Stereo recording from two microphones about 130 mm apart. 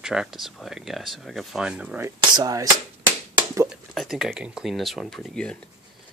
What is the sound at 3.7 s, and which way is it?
Speech, centre (ahead or behind).